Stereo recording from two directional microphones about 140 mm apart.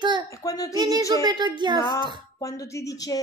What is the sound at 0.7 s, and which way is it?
A child's voice, 30° right (ahead or behind).